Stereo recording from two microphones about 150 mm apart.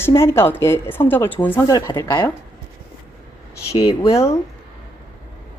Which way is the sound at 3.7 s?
40° left (ahead or behind).